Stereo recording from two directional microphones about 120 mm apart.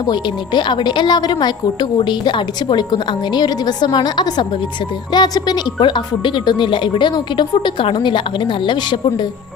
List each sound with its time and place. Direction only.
0.0 s a woman's voice: 35° left (ahead or behind)